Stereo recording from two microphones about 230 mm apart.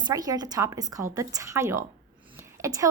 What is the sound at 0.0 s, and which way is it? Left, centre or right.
Speech, centre.